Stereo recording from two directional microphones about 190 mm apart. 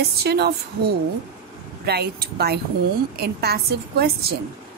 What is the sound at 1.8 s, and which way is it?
A woman's voice, 55° right (ahead or behind).